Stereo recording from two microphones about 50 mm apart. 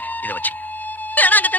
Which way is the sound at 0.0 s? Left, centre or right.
Left.